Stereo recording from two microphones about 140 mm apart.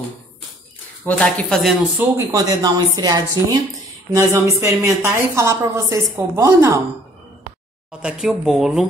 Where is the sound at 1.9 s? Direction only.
25° right (ahead or behind).